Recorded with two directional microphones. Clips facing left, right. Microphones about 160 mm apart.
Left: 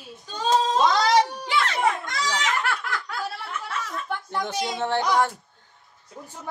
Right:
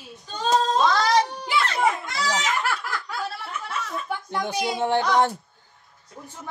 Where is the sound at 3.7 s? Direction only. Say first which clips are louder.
Right 1 dB; 5° right (ahead or behind).